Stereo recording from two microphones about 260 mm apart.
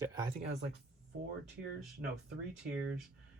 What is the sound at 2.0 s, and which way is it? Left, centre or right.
Speech, right.